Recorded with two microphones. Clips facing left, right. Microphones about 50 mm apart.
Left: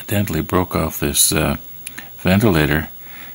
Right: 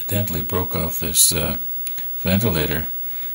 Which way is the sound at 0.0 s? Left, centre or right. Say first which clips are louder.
Left 6 dB; left.